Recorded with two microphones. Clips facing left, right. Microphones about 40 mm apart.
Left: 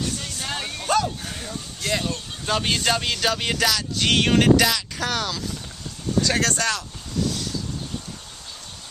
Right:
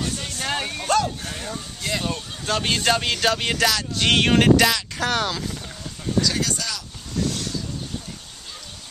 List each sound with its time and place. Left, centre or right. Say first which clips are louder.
0.2 s a sound: right 3 dB; centre
0.8 s speech: even; centre
6.2 s speech: left 3 dB; left